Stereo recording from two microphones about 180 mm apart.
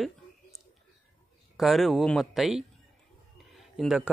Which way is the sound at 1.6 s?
Centre (ahead or behind).